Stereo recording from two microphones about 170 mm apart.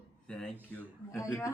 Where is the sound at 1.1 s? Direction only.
20° left (ahead or behind).